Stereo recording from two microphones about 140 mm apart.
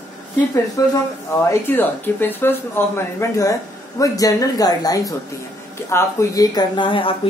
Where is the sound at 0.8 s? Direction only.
25° left (ahead or behind).